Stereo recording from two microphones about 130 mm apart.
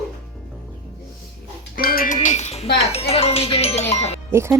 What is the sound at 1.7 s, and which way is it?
Speech, 75° left (ahead or behind).